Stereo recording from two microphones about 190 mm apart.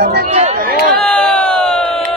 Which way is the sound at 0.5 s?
50° right (ahead or behind).